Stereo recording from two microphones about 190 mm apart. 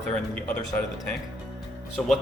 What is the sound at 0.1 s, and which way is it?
Speech, 5° left (ahead or behind).